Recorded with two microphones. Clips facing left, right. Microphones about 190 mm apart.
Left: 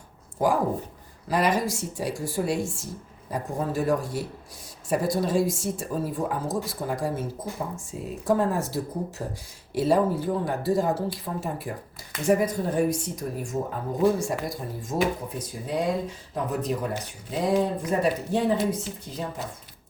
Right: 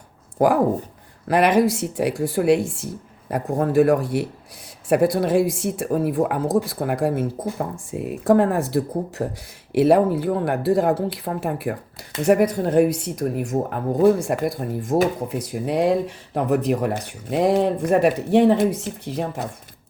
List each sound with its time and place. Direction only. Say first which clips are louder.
0.3 s speech: right 6 dB; 65° right (ahead or behind)
15.3 s speech: right 7 dB; 70° right (ahead or behind)
18.5 s speech: right 6 dB; 55° right (ahead or behind)